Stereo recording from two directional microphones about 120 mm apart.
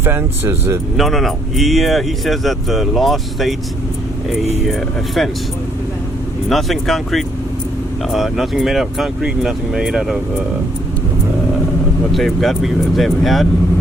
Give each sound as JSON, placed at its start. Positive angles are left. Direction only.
{"t": 0.0, "sound": "speech", "side_deg": -20}
{"t": 0.9, "sound": "speech", "side_deg": 0}
{"t": 4.6, "sound": "speech", "side_deg": 0}
{"t": 6.5, "sound": "speech", "side_deg": 0}
{"t": 12.1, "sound": "speech", "side_deg": 0}